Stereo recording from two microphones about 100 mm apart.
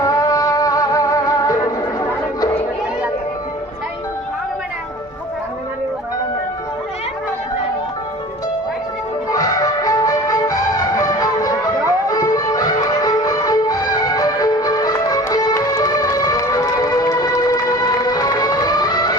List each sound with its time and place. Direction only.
0.0 s music: 35° left (ahead or behind)
9.3 s music: 35° left (ahead or behind)